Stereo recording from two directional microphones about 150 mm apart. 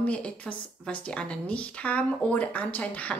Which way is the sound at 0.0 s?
10° left (ahead or behind).